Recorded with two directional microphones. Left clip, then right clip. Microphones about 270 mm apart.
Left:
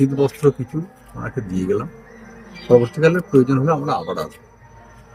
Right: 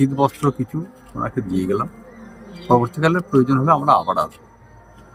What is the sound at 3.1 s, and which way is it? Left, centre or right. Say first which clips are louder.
A man's voice: left 1 dB; centre.